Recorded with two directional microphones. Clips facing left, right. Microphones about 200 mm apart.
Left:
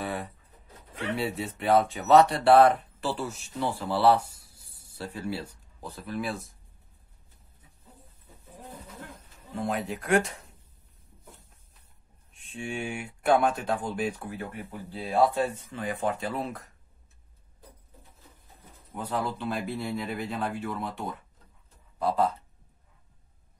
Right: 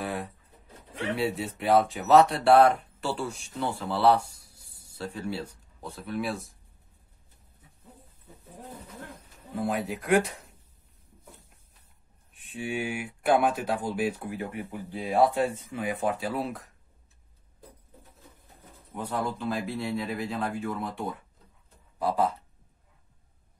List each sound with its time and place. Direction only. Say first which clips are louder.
0.0 s a sound: even; centre (ahead or behind)
0.9 s speech: right 2 dB; centre (ahead or behind)
9.5 s speech: right 1 dB; centre (ahead or behind)
12.4 s speech: right 2 dB; 5° right (ahead or behind)
18.9 s speech: even; centre (ahead or behind)